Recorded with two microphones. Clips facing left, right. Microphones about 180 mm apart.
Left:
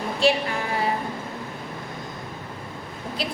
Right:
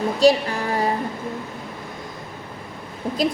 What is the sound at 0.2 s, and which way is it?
Music, 40° right (ahead or behind).